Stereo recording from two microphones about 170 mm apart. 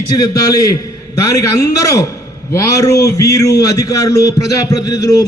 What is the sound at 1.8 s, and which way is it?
A man's voice, 20° left (ahead or behind).